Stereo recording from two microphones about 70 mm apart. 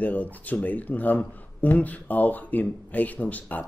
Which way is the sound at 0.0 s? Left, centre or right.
Left.